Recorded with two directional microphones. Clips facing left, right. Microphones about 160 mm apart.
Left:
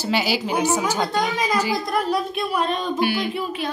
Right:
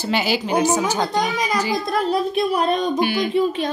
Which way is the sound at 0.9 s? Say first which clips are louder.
Right 1 dB; 20° right (ahead or behind).